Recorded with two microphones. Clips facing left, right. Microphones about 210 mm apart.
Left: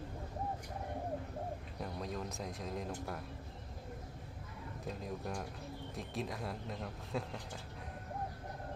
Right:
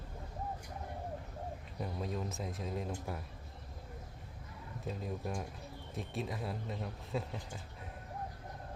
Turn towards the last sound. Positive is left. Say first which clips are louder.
# right 1 dB
turn(degrees=0)  # may be behind; listen again after turning